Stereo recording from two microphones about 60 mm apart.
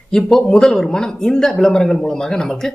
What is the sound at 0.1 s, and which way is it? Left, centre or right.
Speech, centre.